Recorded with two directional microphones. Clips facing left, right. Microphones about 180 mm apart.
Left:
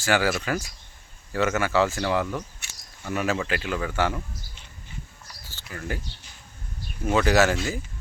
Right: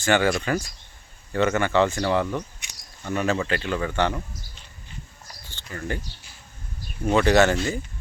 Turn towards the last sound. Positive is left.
turn(degrees=0)  # may be behind; listen again after turning